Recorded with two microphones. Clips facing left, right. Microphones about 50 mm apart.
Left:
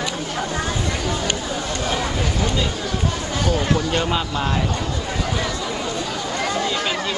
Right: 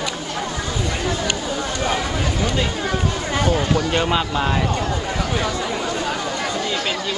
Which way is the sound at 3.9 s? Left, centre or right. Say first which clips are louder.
Right 2 dB; centre.